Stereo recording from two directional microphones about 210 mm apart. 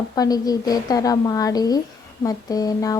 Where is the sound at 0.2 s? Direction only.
20° left (ahead or behind).